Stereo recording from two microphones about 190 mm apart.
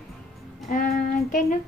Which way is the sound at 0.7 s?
50° left (ahead or behind).